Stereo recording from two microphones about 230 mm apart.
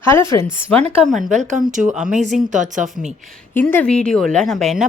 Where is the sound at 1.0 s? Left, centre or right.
Centre.